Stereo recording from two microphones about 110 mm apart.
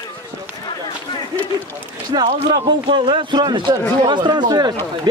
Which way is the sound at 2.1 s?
45° right (ahead or behind).